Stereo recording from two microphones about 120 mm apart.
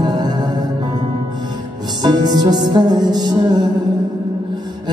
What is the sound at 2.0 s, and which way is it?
Music, 35° right (ahead or behind).